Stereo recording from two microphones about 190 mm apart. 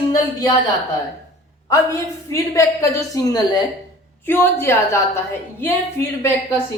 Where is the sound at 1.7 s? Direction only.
15° left (ahead or behind).